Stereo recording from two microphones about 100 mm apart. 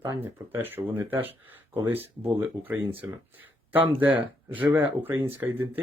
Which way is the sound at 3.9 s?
15° right (ahead or behind).